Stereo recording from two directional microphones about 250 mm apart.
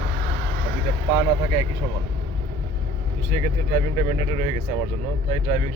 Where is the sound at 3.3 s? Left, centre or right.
Right.